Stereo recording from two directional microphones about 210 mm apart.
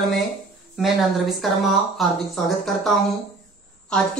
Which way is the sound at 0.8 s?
Centre (ahead or behind).